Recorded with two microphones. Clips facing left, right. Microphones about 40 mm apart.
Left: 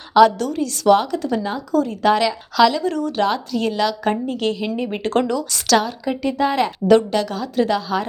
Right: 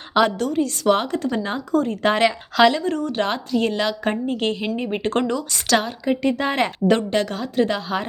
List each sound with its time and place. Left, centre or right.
0.1 s a woman's voice: right
6.2 s a woman's voice: right